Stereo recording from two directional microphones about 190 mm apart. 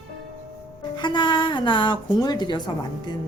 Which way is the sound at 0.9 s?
25° left (ahead or behind).